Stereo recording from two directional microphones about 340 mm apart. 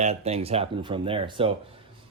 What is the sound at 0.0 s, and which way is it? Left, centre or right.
A man's voice, centre.